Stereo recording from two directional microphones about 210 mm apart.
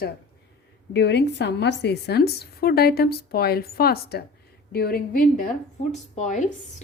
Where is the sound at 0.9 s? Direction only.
55° left (ahead or behind).